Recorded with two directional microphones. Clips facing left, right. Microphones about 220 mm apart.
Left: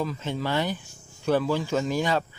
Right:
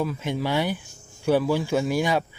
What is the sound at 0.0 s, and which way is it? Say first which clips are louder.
Speech: right 3 dB; 10° right (ahead or behind).